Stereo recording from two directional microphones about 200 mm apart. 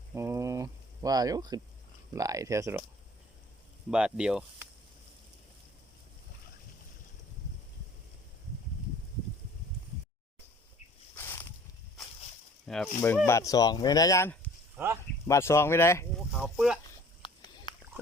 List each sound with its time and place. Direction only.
0.1 s a sound: 15° right (ahead or behind)
2.1 s speech: 15° right (ahead or behind)
3.9 s speech: 5° right (ahead or behind)
11.1 s a sound: 10° left (ahead or behind)
12.6 s speech: centre (ahead or behind)
16.3 s speech: centre (ahead or behind)
17.2 s dog: 25° left (ahead or behind)